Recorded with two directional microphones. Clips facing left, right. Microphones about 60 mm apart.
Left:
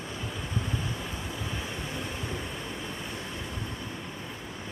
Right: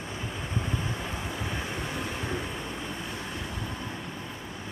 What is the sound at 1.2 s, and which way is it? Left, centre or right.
Vehicle, right.